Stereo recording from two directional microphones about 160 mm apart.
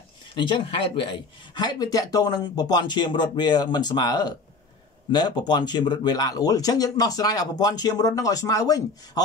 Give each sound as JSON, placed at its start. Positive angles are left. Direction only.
{"t": 0.4, "sound": "speech", "side_deg": 30}